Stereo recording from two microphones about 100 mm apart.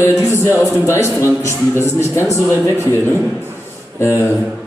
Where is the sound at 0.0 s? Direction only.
25° left (ahead or behind).